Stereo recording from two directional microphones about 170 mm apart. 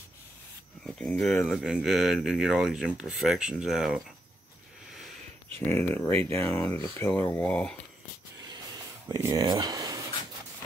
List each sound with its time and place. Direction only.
0.8 s speech: 5° left (ahead or behind)
5.5 s speech: 15° left (ahead or behind)
9.1 s speech: 20° right (ahead or behind)